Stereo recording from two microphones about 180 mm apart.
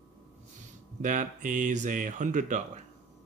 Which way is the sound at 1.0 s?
45° right (ahead or behind).